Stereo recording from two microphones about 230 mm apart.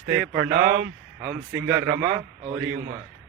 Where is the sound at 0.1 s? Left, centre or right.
Right.